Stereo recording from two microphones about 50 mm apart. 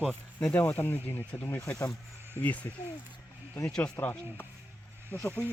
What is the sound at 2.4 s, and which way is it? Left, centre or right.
Speech, left.